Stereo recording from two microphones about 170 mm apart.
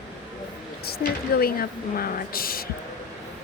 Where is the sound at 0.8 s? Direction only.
60° left (ahead or behind).